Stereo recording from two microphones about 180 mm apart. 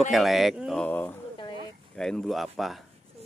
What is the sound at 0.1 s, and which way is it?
Speech, centre (ahead or behind).